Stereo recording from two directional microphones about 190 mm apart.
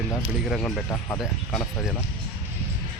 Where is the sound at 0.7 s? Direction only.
15° left (ahead or behind).